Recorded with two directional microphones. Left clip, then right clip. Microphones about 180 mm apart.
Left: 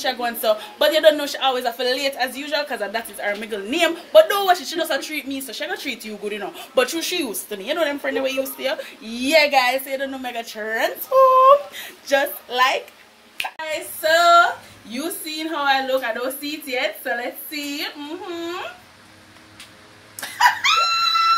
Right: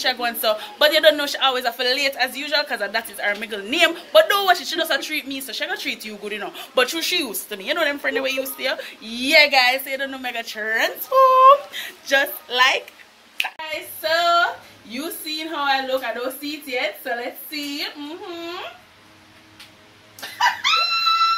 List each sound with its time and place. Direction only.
0.0 s speech: 20° left (ahead or behind)
20.2 s dog: 5° left (ahead or behind)